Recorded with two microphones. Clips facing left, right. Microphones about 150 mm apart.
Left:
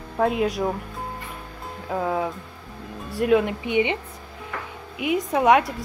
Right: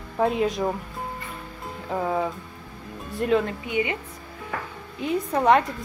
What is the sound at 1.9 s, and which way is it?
Speech, centre (ahead or behind).